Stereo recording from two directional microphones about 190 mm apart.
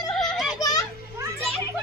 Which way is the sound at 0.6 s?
20° left (ahead or behind).